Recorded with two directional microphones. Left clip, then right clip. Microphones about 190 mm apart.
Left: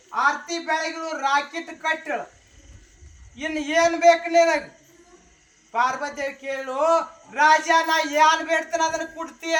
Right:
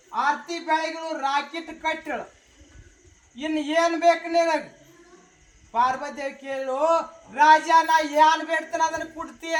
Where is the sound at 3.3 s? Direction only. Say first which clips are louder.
Left 1 dB; 15° left (ahead or behind).